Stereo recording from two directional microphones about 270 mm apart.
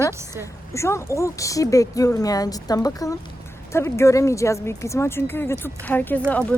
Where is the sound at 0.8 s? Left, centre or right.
Centre.